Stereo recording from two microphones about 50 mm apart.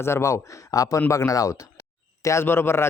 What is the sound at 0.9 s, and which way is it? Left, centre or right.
Speech, left.